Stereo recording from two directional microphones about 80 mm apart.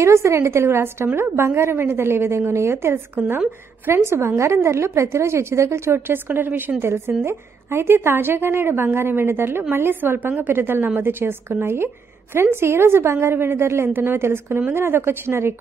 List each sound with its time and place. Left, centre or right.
0.0 s a woman's voice: right